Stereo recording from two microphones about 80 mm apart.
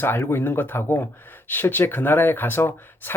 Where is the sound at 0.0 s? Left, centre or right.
Left.